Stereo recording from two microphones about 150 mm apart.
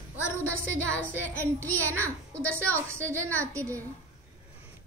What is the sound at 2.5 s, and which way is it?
A woman's voice, 15° right (ahead or behind).